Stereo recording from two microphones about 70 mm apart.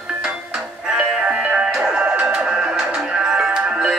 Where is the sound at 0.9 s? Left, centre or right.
Centre.